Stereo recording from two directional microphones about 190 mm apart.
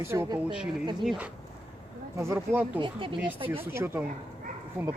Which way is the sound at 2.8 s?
25° right (ahead or behind).